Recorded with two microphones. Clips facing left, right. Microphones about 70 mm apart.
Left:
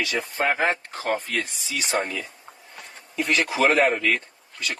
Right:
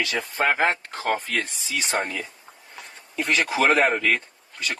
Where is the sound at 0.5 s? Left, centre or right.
Right.